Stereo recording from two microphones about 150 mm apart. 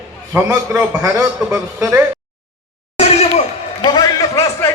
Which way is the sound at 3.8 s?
30° left (ahead or behind).